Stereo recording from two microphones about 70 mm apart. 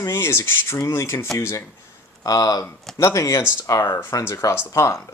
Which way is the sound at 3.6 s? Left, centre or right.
Left.